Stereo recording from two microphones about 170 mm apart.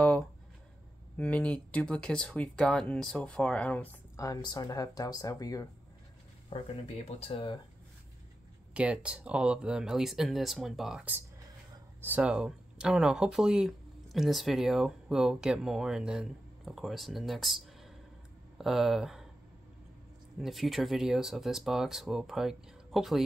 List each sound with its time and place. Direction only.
0.0 s a sound: 5° left (ahead or behind)
1.1 s speech: 5° left (ahead or behind)
6.5 s speech: 35° left (ahead or behind)
8.7 s speech: 5° right (ahead or behind)
20.3 s speech: centre (ahead or behind)